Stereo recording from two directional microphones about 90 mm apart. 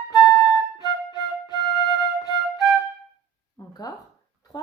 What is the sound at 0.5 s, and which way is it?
Flute, 50° left (ahead or behind).